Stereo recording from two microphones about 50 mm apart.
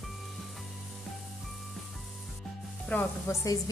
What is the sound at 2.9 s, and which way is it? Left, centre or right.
Speech, left.